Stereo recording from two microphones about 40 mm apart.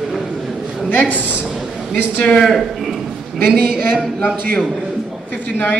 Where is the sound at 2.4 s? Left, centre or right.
Centre.